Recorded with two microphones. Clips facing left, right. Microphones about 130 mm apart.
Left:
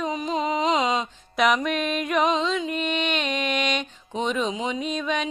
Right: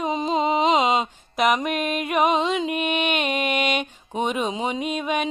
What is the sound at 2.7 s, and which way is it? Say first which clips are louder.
Music: right 2 dB; 10° right (ahead or behind).